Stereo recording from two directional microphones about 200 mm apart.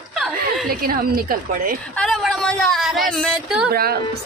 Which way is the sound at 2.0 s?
Centre (ahead or behind).